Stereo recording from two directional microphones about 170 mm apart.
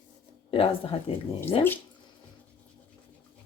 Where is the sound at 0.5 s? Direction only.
30° left (ahead or behind).